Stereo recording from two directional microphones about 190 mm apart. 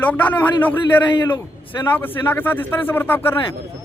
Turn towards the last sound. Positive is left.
turn(degrees=10)  # may be behind; listen again after turning